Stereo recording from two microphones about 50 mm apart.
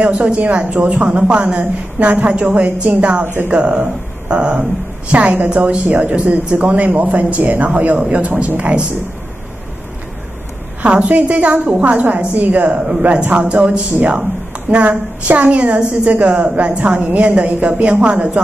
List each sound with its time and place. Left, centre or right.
0.0 s a woman's voice: right
5.9 s a man's voice: right
10.8 s a woman's voice: right
12.6 s speech: centre
13.1 s a woman's voice: right